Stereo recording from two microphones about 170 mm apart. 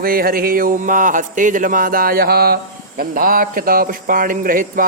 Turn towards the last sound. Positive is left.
turn(degrees=-55)  # may be behind; listen again after turning